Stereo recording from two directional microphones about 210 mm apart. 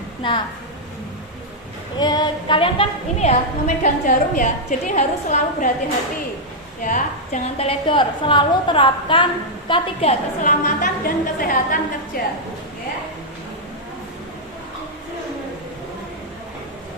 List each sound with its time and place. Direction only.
0.2 s a woman's voice: 25° left (ahead or behind)
2.0 s a woman's voice: 20° left (ahead or behind); by 5.7 s 35° left (ahead or behind)
6.8 s a woman's voice: 35° left (ahead or behind)